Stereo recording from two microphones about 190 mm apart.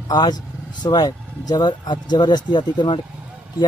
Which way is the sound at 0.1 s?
20° left (ahead or behind).